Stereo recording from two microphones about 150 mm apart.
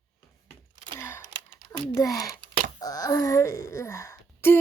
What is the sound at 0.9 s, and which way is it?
Sigh, 15° left (ahead or behind).